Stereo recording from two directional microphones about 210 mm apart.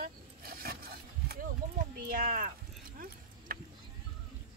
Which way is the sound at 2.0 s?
45° right (ahead or behind).